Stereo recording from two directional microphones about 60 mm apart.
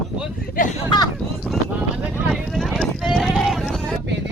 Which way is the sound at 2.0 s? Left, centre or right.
Centre.